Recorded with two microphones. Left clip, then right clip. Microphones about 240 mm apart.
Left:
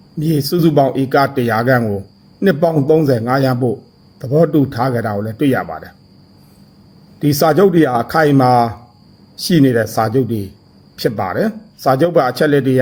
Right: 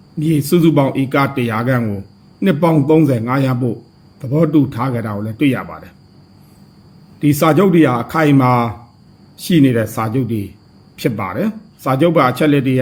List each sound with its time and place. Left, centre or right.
0.2 s speech: left
7.3 s speech: centre